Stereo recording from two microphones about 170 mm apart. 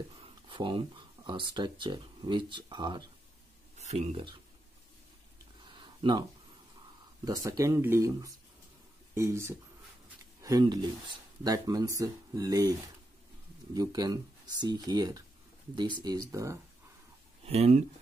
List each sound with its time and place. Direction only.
0.5 s speech: 30° right (ahead or behind)
3.7 s speech: 40° right (ahead or behind)
5.8 s a sound: 25° right (ahead or behind)
7.4 s speech: 20° right (ahead or behind)
13.7 s speech: 20° right (ahead or behind)
17.5 s speech: 40° right (ahead or behind)